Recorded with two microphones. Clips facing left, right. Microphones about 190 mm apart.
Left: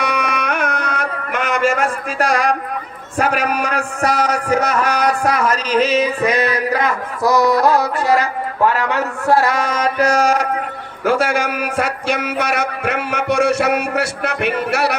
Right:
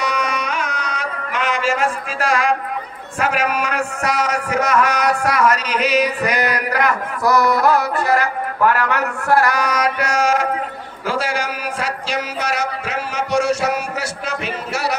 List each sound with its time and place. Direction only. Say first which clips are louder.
0.0 s music: left 2 dB; 60° left (ahead or behind); by 2.4 s 45° left (ahead or behind)
3.2 s a man's voice: left 2 dB; 40° left (ahead or behind); by 8.3 s 20° left (ahead or behind)
8.8 s a sound: left 1 dB; 20° left (ahead or behind)
11.0 s a man's voice: left 5 dB; 55° left (ahead or behind)